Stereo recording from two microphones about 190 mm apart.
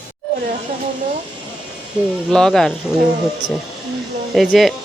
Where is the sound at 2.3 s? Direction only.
Centre (ahead or behind).